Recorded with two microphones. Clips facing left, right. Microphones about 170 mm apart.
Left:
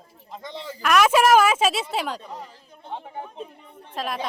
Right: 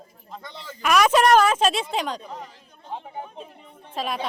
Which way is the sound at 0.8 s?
Centre (ahead or behind).